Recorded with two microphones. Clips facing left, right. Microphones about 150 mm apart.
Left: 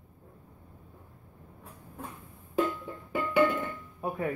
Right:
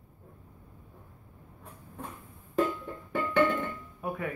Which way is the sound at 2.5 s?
10° left (ahead or behind).